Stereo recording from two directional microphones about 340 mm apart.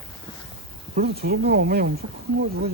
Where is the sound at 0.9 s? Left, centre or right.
Right.